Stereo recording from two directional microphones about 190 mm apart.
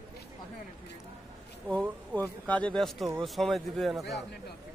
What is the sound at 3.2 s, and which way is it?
A man's voice, centre (ahead or behind).